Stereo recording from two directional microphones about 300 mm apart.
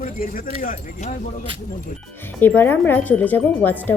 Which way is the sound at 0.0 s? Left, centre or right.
Left.